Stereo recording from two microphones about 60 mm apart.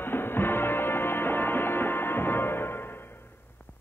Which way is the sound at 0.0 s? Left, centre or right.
Left.